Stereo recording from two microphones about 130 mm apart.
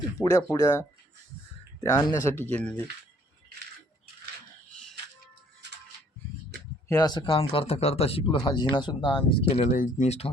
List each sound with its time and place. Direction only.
0.2 s speech: 25° left (ahead or behind)
2.5 s speech: 10° left (ahead or behind)
6.8 s speech: 30° left (ahead or behind)
7.3 s speech: 45° left (ahead or behind)
9.6 s speech: 85° left
10.1 s speech: 50° left (ahead or behind)